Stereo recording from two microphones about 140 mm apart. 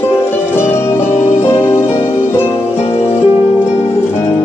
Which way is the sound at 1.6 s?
40° left (ahead or behind).